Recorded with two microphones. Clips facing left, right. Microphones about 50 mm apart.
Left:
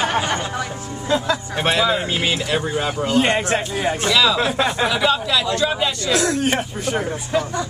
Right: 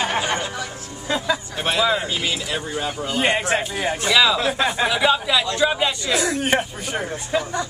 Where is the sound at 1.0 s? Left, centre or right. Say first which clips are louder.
Left 3 dB; centre.